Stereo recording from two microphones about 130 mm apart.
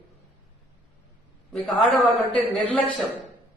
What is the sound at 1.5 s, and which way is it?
Speech, 5° left (ahead or behind).